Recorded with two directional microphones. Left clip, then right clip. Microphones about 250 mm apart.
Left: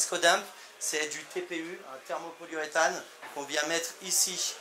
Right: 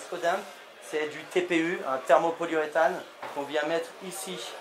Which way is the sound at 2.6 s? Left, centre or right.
Centre.